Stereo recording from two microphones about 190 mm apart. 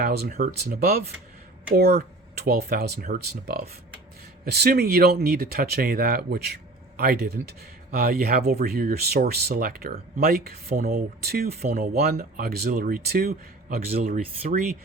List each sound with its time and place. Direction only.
0.0 s speech: 50° right (ahead or behind)
14.0 s speech: 35° right (ahead or behind)